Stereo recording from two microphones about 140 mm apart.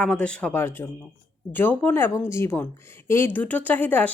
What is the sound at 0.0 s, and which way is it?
Speech, 5° left (ahead or behind).